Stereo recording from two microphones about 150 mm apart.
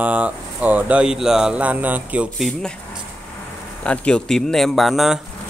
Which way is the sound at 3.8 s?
10° left (ahead or behind).